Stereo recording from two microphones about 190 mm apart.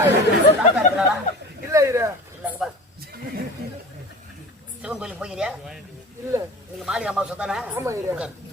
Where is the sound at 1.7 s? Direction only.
15° right (ahead or behind).